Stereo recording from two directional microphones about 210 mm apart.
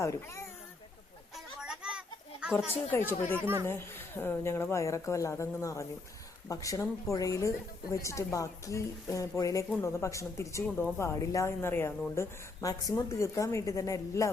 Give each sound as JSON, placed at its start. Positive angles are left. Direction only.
{"t": 0.0, "sound": "a woman's voice", "side_deg": 15}
{"t": 1.6, "sound": "children playing", "side_deg": -5}
{"t": 2.9, "sound": "a woman's voice", "side_deg": 10}
{"t": 3.3, "sound": "speech", "side_deg": -10}
{"t": 3.7, "sound": "a woman's voice", "side_deg": 10}